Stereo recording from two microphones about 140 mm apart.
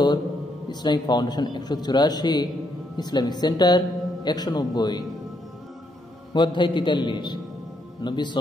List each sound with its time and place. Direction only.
0.7 s a man's voice: 30° left (ahead or behind)
6.3 s a man's voice: 35° left (ahead or behind)